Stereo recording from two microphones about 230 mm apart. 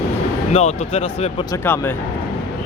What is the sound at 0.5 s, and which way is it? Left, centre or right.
Speech, left.